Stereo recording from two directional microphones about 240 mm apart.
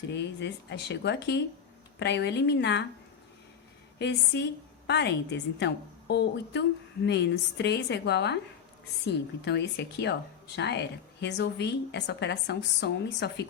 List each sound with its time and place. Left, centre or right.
0.1 s speech: left
3.9 s speech: left